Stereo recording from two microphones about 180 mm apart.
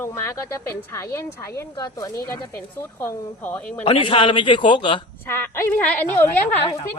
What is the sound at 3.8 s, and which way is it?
A woman's voice, 30° left (ahead or behind).